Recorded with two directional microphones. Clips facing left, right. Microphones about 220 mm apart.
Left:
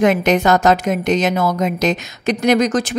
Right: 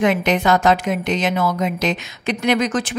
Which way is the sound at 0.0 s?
45° left (ahead or behind).